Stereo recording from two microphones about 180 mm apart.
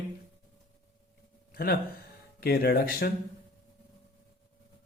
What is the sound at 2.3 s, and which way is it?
Speech, 55° left (ahead or behind).